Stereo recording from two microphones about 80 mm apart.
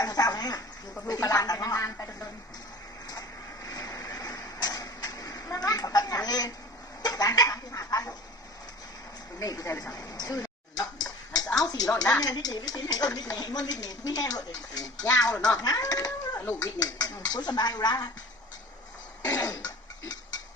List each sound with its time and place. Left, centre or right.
0.0 s speech: left
3.1 s a sound: left
9.4 s speech: left
9.9 s a sound: left
11.5 s speech: left
16.4 s speech: left
16.7 s speech: left
19.2 s cough: left